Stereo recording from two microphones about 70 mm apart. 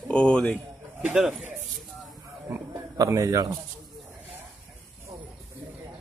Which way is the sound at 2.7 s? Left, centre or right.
Right.